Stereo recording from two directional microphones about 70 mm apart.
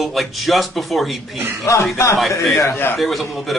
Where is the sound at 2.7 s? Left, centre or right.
Left.